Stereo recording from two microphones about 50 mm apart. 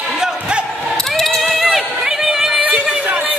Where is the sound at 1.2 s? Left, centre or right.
Centre.